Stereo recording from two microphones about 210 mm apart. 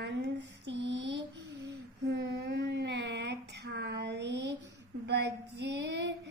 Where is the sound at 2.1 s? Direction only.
50° right (ahead or behind).